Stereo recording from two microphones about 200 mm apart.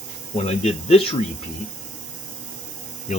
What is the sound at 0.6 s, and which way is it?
Speech, 30° left (ahead or behind).